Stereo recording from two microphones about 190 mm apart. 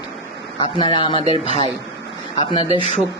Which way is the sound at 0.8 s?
25° left (ahead or behind).